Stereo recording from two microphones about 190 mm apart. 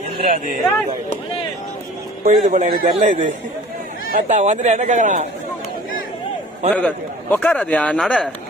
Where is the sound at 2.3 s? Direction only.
45° right (ahead or behind).